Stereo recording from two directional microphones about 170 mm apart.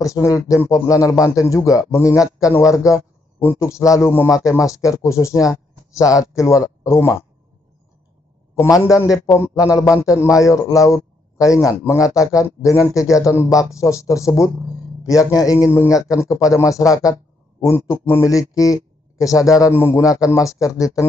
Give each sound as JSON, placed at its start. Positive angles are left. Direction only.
{"t": 0.0, "sound": "a man's voice", "side_deg": 20}
{"t": 8.5, "sound": "a man's voice", "side_deg": 20}